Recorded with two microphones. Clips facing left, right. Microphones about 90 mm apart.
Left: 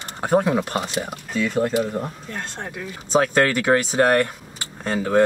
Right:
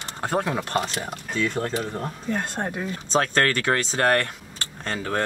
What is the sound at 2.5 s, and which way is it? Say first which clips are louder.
Speech: right 4 dB; 45° right (ahead or behind).